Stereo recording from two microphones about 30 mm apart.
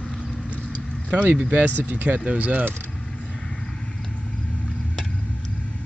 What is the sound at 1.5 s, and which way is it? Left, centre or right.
Speech, right.